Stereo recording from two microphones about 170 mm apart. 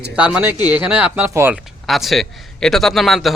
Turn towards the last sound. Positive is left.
turn(degrees=0)  # may be behind; listen again after turning